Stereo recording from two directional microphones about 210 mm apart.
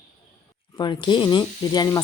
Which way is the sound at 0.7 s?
20° left (ahead or behind).